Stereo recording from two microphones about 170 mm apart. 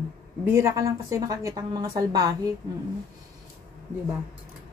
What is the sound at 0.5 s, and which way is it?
Speech, 15° right (ahead or behind).